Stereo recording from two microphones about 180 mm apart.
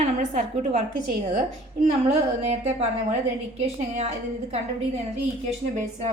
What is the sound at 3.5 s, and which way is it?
A woman's voice, 35° right (ahead or behind).